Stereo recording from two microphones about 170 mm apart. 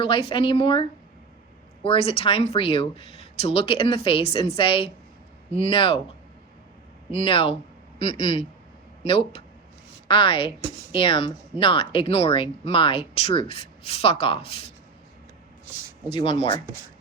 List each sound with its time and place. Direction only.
0.0 s speech: 30° left (ahead or behind)
7.1 s speech: 35° left (ahead or behind)
16.1 s speech: 35° left (ahead or behind)